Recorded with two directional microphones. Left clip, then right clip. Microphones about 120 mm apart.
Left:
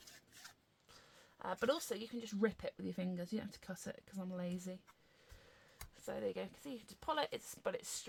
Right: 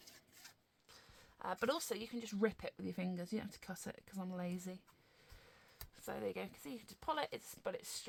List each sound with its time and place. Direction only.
0.9 s speech: 25° right (ahead or behind)
6.0 s speech: 40° right (ahead or behind); by 8.0 s 15° right (ahead or behind)